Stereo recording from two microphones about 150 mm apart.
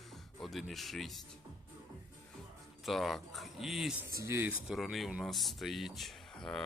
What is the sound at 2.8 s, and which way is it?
Speech, centre (ahead or behind).